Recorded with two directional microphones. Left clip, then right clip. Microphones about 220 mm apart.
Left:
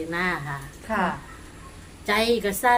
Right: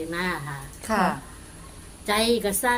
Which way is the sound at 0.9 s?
55° right (ahead or behind).